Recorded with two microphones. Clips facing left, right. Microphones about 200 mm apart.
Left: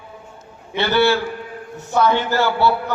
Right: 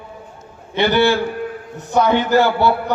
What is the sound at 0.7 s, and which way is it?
A man's voice, 15° right (ahead or behind).